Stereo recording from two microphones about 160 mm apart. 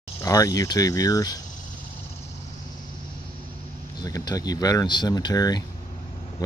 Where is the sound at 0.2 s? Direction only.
20° left (ahead or behind).